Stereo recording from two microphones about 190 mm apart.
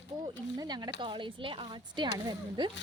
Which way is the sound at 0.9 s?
25° right (ahead or behind).